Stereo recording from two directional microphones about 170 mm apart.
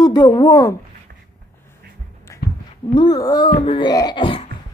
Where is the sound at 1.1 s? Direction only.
75° right (ahead or behind).